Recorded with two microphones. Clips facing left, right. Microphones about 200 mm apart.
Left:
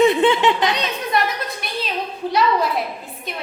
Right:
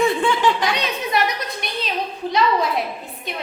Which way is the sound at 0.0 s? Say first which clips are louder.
Left 4 dB; 20° left (ahead or behind).